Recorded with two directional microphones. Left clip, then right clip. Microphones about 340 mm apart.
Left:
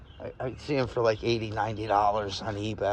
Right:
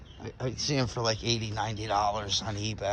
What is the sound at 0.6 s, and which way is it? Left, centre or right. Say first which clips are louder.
Speech: left 4 dB; centre.